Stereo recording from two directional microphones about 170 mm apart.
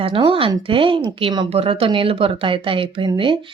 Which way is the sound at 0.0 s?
30° right (ahead or behind).